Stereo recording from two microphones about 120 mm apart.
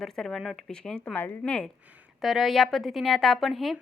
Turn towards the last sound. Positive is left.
turn(degrees=0)  # may be behind; listen again after turning